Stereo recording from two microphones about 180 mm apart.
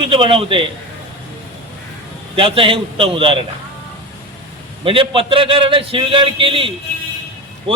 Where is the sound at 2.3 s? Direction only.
30° right (ahead or behind).